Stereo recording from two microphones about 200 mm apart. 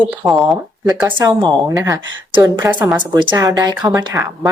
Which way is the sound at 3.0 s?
25° right (ahead or behind).